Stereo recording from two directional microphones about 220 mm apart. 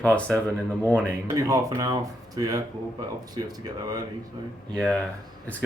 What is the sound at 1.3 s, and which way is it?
Speech, 15° right (ahead or behind).